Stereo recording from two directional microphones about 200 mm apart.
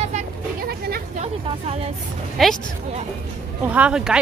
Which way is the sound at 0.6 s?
50° right (ahead or behind).